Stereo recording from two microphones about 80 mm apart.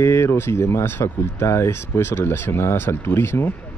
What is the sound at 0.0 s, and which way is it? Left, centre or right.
Speech, left.